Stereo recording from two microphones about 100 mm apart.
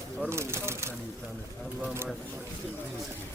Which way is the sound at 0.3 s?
25° right (ahead or behind).